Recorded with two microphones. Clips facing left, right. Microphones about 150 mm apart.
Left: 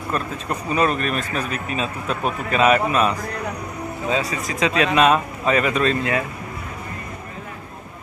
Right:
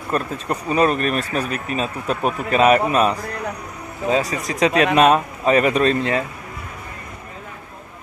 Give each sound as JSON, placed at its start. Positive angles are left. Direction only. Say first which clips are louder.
{"t": 0.1, "sound": "speech", "louder": "right 3 dB", "side_deg": -35}